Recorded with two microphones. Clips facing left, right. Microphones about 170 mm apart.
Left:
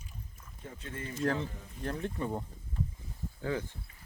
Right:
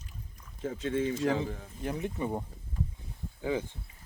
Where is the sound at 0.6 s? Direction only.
90° right.